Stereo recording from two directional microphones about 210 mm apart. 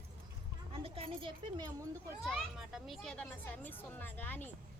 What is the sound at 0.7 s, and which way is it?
Speech, 25° right (ahead or behind).